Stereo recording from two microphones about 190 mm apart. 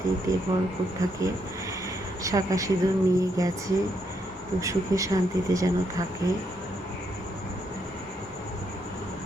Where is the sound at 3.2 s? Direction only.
20° right (ahead or behind).